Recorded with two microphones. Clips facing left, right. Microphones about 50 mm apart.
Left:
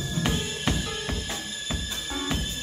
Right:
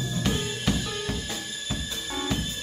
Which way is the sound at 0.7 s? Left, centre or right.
Left.